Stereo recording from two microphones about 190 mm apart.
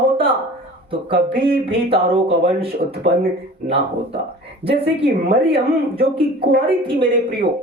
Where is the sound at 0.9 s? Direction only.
25° right (ahead or behind).